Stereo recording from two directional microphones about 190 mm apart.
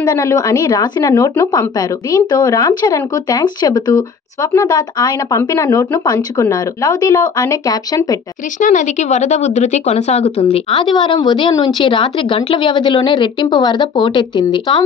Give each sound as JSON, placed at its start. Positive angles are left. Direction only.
{"t": 0.0, "sound": "a woman's voice", "side_deg": 15}
{"t": 8.5, "sound": "speech", "side_deg": 40}